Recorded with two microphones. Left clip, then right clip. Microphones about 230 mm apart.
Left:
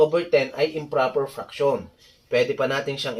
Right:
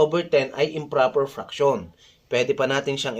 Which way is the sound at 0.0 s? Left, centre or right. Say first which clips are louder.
Left 1 dB; right.